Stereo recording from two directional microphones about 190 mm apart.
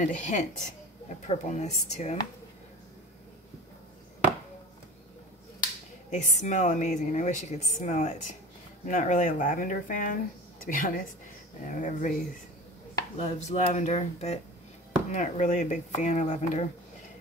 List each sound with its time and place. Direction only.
0.0 s a woman's voice: 40° left (ahead or behind)
6.0 s a woman's voice: 40° left (ahead or behind)
13.2 s a woman's voice: 35° left (ahead or behind)